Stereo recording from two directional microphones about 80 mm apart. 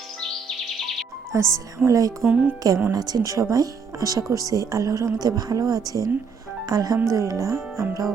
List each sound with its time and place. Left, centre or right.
1.3 s speech: right
2.2 s speech: centre
2.9 s speech: right